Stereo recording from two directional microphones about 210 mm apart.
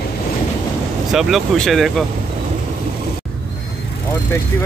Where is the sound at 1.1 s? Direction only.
Centre (ahead or behind).